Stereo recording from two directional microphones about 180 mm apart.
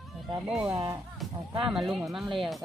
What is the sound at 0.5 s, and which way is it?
Speech, 5° right (ahead or behind).